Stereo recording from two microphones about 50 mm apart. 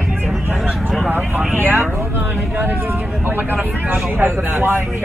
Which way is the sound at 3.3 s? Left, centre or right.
Right.